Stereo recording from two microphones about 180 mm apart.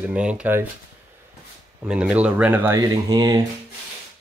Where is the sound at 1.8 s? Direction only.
5° right (ahead or behind).